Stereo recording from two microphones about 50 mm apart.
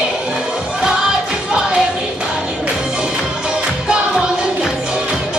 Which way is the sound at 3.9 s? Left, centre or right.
Centre.